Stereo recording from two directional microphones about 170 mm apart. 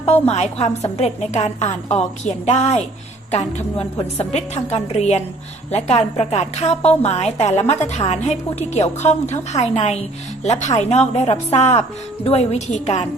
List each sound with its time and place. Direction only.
0.0 s a woman's voice: 40° left (ahead or behind)
4.2 s a woman's voice: 40° left (ahead or behind)